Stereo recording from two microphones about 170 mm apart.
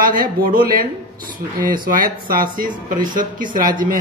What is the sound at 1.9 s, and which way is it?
A man's voice, 55° right (ahead or behind).